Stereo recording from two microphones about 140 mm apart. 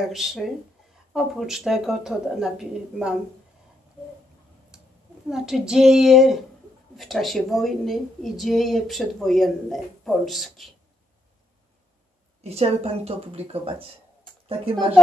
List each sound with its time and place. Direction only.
0.1 s a woman's voice: centre (ahead or behind)
5.3 s a woman's voice: 5° right (ahead or behind)
12.4 s a woman's voice: 50° right (ahead or behind)